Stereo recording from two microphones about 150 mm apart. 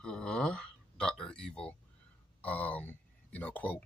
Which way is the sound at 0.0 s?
5° left (ahead or behind).